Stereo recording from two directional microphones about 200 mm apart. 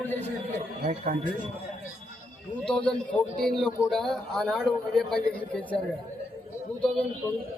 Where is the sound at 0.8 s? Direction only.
45° right (ahead or behind).